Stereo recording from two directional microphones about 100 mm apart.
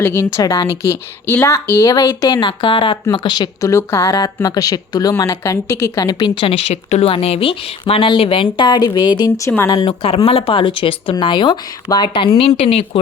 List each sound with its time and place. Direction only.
0.0 s speech: 25° left (ahead or behind)
0.3 s a woman's voice: 40° left (ahead or behind)
0.8 s speech: 25° left (ahead or behind)
1.9 s a woman's voice: 40° left (ahead or behind)
2.4 s a woman's voice: 55° left (ahead or behind)
3.6 s a woman's voice: 30° left (ahead or behind)
4.4 s a woman's voice: 40° left (ahead or behind)
6.1 s speech: 45° left (ahead or behind)
6.4 s a woman's voice: 70° left (ahead or behind); by 9.3 s 45° left (ahead or behind)
9.8 s a woman's voice: 65° left (ahead or behind)
10.2 s a woman's voice: 75° left (ahead or behind); by 12.3 s 55° left (ahead or behind)
12.4 s speech: 90° left